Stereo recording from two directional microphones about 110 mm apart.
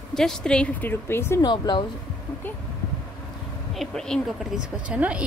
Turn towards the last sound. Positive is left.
turn(degrees=-10)  # may be behind; listen again after turning